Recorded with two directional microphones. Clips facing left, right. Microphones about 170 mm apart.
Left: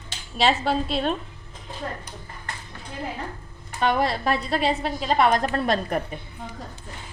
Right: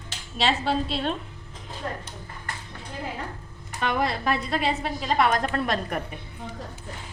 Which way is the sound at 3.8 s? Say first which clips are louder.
Left 3 dB; 35° left (ahead or behind).